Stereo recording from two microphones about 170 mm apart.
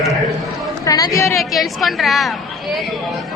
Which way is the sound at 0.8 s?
20° left (ahead or behind).